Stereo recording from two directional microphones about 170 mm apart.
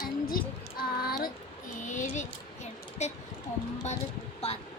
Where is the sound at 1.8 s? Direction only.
45° left (ahead or behind).